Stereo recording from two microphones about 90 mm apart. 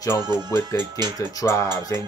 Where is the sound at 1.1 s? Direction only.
35° left (ahead or behind).